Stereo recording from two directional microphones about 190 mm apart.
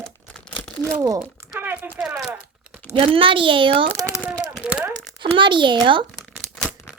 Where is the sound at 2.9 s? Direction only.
30° right (ahead or behind).